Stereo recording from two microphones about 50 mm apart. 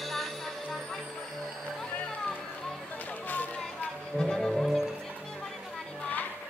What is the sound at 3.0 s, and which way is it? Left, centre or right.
Music, left.